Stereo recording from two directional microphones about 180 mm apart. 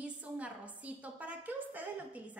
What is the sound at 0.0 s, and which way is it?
A woman's voice, 5° right (ahead or behind).